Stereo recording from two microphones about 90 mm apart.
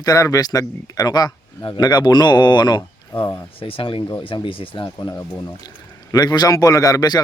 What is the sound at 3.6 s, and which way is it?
Speech, 85° left.